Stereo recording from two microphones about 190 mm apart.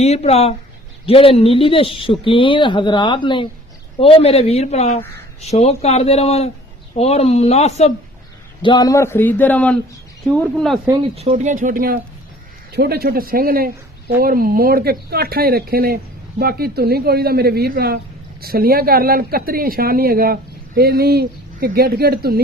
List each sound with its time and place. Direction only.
0.0 s speech: 35° left (ahead or behind)
8.6 s a man's voice: 20° left (ahead or behind)
11.1 s speech: 35° right (ahead or behind); by 22.4 s 55° right (ahead or behind)